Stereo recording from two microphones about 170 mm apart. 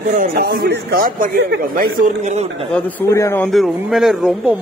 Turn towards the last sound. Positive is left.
turn(degrees=-5)  # may be behind; listen again after turning